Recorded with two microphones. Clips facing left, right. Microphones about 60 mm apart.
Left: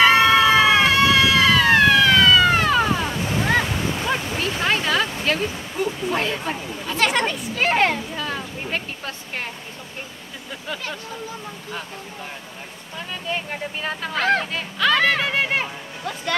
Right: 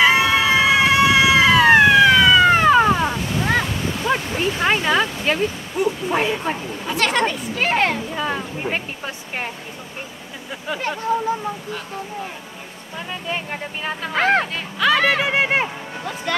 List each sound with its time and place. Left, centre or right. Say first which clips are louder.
0.0 s a sound: left 1 dB; centre
3.4 s waves: even; centre
4.3 s a sound: right 3 dB; centre
7.0 s speech: right 1 dB; centre
8.1 s a sound: right 4 dB; centre
8.7 s speech: right 2 dB; centre
13.3 s speech: left 1 dB; centre
14.1 s speech: right 3 dB; right
14.5 s speech: right 2 dB; centre